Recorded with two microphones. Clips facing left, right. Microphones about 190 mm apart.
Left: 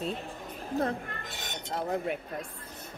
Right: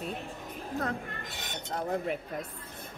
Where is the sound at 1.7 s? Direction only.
5° left (ahead or behind).